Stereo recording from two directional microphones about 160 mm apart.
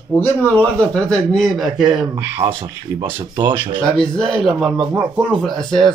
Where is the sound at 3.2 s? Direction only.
30° right (ahead or behind).